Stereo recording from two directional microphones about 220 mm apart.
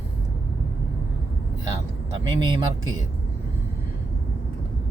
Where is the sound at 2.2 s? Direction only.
20° right (ahead or behind).